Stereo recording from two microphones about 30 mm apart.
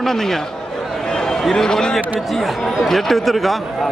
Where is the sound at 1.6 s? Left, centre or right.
Centre.